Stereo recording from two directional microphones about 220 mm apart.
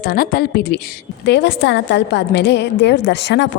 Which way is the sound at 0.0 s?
45° left (ahead or behind).